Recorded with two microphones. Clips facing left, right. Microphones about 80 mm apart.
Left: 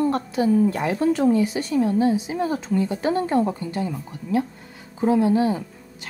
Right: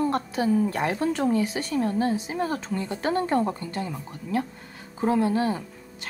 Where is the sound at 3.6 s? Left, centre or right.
Centre.